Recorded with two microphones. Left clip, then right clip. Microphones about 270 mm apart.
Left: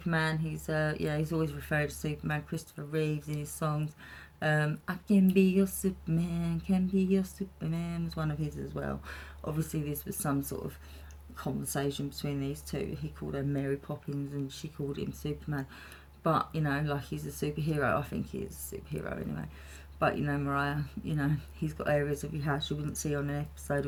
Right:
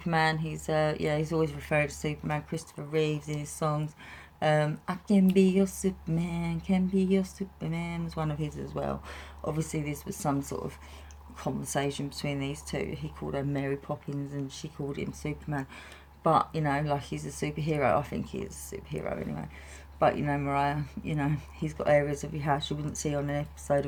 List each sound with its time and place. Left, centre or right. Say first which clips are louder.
0.0 s speech: right 5 dB; centre